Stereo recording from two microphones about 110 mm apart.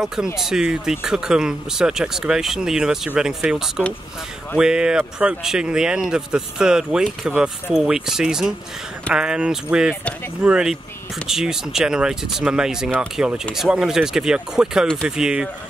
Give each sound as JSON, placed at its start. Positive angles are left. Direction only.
{"t": 0.0, "sound": "speech", "side_deg": -5}